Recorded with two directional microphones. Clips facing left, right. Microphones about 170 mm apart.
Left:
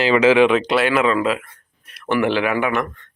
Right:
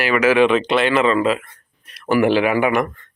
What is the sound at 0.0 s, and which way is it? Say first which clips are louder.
Speech: left 2 dB; 20° left (ahead or behind).